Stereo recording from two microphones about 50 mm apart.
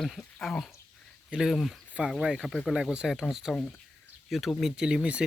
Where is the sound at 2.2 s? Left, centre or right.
Centre.